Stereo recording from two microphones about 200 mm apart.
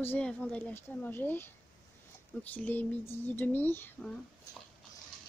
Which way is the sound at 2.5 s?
10° left (ahead or behind).